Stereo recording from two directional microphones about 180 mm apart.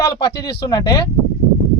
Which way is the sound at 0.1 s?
25° left (ahead or behind).